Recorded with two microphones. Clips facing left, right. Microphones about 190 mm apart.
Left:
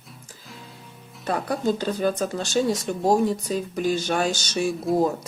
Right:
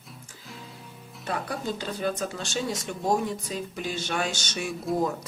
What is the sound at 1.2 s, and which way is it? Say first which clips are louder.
Speech: left 7 dB; 40° left (ahead or behind).